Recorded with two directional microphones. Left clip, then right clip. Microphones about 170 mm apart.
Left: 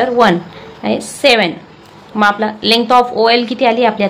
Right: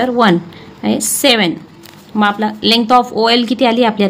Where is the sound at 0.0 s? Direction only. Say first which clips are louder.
Left 1 dB; 45° right (ahead or behind).